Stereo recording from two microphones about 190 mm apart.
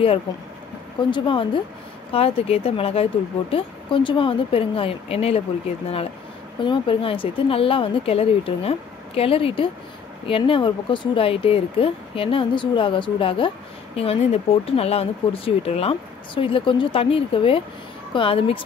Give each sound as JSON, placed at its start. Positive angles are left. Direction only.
{"t": 1.1, "sound": "speech", "side_deg": 25}
{"t": 6.6, "sound": "speech", "side_deg": 25}